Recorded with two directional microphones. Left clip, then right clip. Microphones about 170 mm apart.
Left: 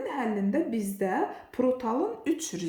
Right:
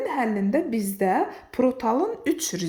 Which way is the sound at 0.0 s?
40° right (ahead or behind).